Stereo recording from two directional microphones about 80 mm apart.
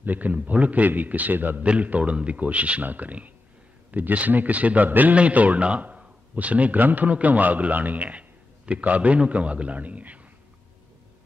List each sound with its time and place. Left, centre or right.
0.0 s a man's voice: right